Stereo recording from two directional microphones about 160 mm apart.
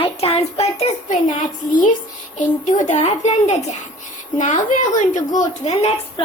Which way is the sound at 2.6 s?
50° left (ahead or behind).